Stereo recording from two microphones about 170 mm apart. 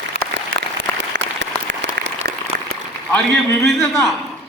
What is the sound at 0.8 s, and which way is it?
Applause, 90° right.